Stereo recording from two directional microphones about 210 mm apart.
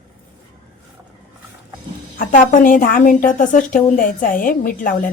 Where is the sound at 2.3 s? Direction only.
40° left (ahead or behind).